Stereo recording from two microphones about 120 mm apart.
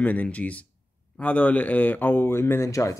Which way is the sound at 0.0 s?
10° left (ahead or behind).